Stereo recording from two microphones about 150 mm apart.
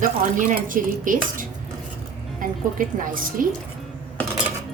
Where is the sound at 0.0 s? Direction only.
65° right (ahead or behind).